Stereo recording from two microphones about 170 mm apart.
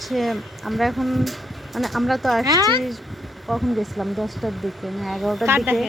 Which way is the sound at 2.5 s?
20° right (ahead or behind).